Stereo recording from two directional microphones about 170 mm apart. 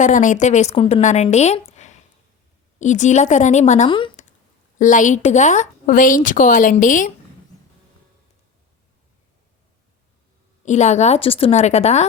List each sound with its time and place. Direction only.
0.0 s a woman's voice: 45° left (ahead or behind)
3.8 s speech: 30° left (ahead or behind)
4.8 s a woman's voice: 50° left (ahead or behind)
10.7 s a woman's voice: 45° left (ahead or behind)